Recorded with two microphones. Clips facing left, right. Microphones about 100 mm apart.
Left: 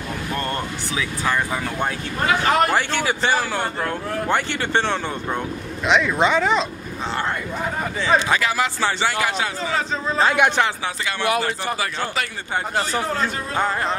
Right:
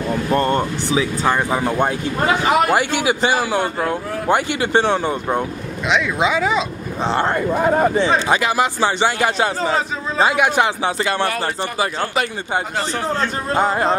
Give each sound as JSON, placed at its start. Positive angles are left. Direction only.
{"t": 0.3, "sound": "speech", "side_deg": -30}
{"t": 2.5, "sound": "a man's voice", "side_deg": -10}
{"t": 5.9, "sound": "speech", "side_deg": 0}
{"t": 7.1, "sound": "speech", "side_deg": -30}
{"t": 7.3, "sound": "speech", "side_deg": -45}
{"t": 8.0, "sound": "speech", "side_deg": -20}
{"t": 9.4, "sound": "speech", "side_deg": -35}
{"t": 10.3, "sound": "speech", "side_deg": 0}
{"t": 13.7, "sound": "speech", "side_deg": -30}